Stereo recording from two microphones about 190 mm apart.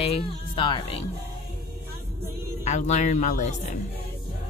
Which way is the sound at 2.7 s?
40° left (ahead or behind).